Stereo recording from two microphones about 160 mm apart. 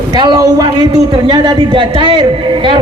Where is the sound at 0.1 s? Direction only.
25° right (ahead or behind).